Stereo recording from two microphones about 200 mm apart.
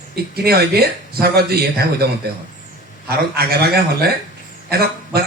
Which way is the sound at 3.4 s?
50° right (ahead or behind).